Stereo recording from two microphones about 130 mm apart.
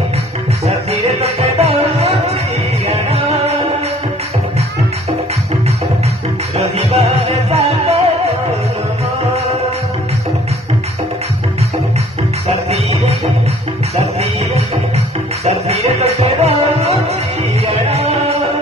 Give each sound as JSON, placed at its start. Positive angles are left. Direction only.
{"t": 0.7, "sound": "music", "side_deg": -55}
{"t": 6.8, "sound": "music", "side_deg": -55}
{"t": 15.4, "sound": "music", "side_deg": -55}